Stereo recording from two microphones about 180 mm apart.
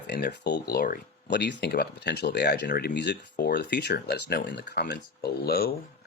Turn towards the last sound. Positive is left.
turn(degrees=60)  # may be behind; listen again after turning